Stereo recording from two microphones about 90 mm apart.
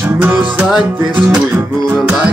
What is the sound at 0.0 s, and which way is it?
Music, 20° right (ahead or behind).